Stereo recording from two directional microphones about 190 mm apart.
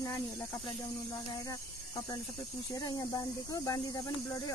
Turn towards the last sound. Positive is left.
turn(degrees=20)  # may be behind; listen again after turning